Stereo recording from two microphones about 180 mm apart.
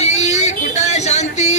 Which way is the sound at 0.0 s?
40° left (ahead or behind).